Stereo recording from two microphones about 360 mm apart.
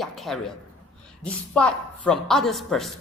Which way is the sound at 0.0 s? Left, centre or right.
Centre.